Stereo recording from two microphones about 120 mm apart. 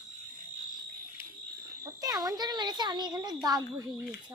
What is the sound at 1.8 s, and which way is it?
Speech, 30° right (ahead or behind).